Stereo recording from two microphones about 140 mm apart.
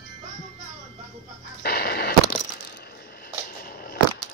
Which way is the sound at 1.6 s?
90° left.